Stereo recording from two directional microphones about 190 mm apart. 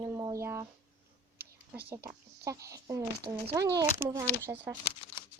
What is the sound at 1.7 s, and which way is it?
Speech, 15° right (ahead or behind).